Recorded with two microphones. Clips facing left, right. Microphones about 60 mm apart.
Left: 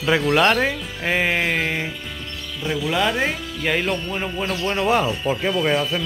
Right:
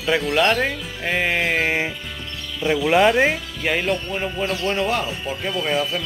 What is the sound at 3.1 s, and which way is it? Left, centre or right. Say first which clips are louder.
Speech: right 4 dB; centre.